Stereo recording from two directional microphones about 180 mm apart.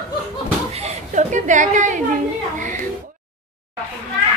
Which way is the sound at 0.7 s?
40° right (ahead or behind).